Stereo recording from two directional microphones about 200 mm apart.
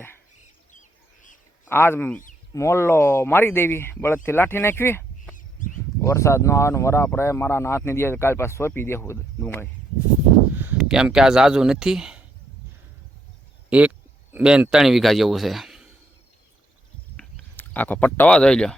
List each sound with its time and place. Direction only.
0.7 s chicken: 40° left (ahead or behind)
1.6 s speech: 10° left (ahead or behind)
5.3 s a sound: 40° left (ahead or behind)
6.0 s speech: 15° left (ahead or behind)
10.5 s speech: 10° right (ahead or behind)
13.7 s speech: 5° right (ahead or behind)
17.2 s speech: 10° left (ahead or behind)